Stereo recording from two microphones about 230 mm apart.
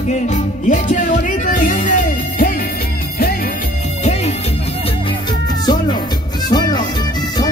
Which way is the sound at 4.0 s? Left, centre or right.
Left.